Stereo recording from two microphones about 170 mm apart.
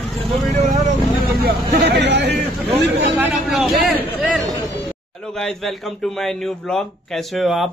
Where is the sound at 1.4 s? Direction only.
75° right (ahead or behind).